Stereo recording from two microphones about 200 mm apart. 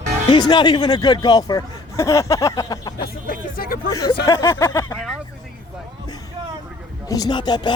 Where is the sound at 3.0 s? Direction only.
45° left (ahead or behind).